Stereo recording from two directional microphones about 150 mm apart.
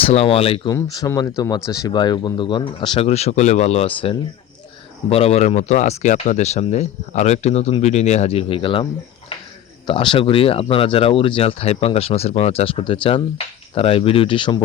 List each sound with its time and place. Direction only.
0.0 s speech: 40° left (ahead or behind)
0.7 s speech: 25° left (ahead or behind)
3.1 s speech: 45° left (ahead or behind)